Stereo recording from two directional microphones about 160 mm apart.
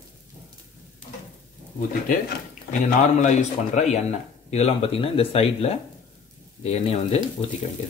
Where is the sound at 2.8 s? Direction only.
45° left (ahead or behind).